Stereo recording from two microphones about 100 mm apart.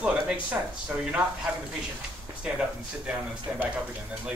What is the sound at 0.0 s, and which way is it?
Speech, 10° right (ahead or behind).